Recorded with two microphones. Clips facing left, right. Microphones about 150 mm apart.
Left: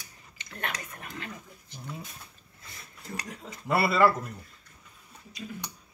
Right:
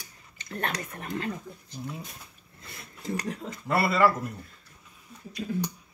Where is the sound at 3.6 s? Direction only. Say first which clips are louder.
Even; 5° left (ahead or behind).